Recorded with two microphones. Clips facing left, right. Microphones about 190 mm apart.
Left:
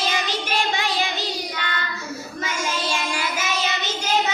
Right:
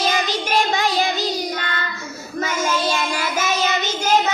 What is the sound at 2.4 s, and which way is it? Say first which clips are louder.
Child singing: right 5 dB; 40° right (ahead or behind).